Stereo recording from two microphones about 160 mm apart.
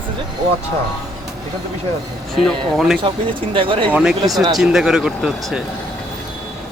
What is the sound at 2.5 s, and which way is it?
Speech, centre (ahead or behind).